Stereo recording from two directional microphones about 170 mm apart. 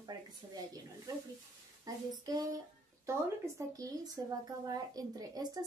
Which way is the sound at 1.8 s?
20° right (ahead or behind).